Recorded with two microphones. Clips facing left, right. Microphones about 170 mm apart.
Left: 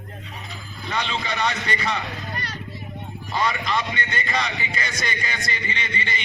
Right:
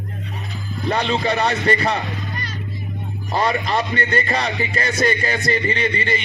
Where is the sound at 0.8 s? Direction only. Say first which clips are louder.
Right 8 dB; 40° right (ahead or behind).